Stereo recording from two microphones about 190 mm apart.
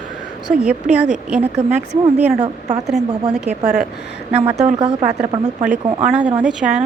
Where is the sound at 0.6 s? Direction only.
5° right (ahead or behind).